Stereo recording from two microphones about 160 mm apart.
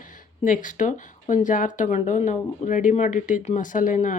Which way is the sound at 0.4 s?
55° left (ahead or behind).